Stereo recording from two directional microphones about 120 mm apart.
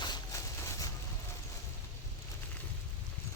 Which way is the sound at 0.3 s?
25° left (ahead or behind).